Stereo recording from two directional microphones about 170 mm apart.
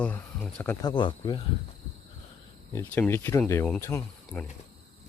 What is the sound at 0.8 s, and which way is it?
Speech, 25° left (ahead or behind).